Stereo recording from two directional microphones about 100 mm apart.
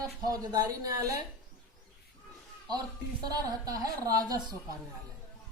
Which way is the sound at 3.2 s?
40° right (ahead or behind).